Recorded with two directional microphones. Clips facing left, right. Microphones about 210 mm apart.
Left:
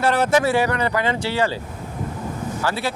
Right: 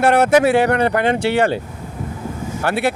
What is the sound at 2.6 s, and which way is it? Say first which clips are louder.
Speech: right 6 dB; 65° right (ahead or behind).